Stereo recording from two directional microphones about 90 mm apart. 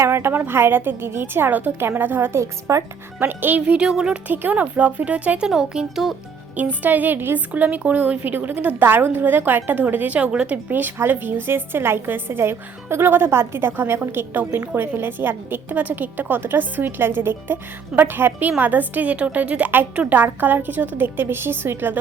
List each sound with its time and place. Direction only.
0.0 s a woman's voice: 25° right (ahead or behind)
3.2 s speech: 20° right (ahead or behind)
4.3 s speech: 20° right (ahead or behind)
6.6 s a woman's voice: 20° right (ahead or behind)